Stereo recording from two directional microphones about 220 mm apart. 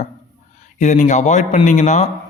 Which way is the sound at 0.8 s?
35° left (ahead or behind).